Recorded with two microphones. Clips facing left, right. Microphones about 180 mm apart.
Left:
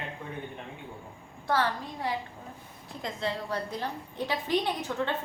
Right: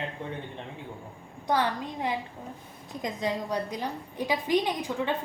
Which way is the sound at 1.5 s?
20° right (ahead or behind).